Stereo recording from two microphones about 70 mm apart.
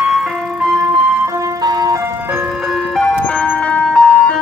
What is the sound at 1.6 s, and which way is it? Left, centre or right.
Ice cream truck, right.